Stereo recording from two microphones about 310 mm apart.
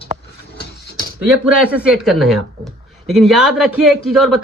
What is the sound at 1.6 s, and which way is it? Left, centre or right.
Speech, centre.